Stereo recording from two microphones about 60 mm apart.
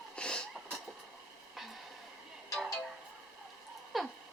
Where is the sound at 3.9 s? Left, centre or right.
Centre.